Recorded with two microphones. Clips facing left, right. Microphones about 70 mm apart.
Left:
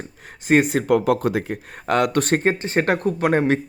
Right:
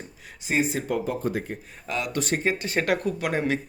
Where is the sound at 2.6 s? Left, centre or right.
Left.